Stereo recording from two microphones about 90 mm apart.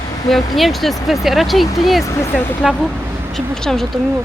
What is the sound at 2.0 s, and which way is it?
Speech, 35° left (ahead or behind).